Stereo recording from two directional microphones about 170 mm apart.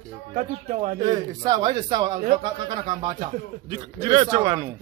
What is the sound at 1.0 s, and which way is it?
A man's voice, 25° right (ahead or behind).